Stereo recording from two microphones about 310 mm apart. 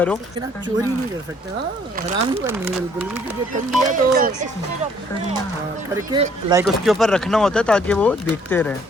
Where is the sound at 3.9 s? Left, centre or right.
Right.